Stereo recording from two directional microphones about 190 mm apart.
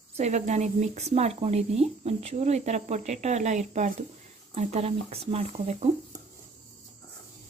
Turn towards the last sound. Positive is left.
turn(degrees=-35)  # may be behind; listen again after turning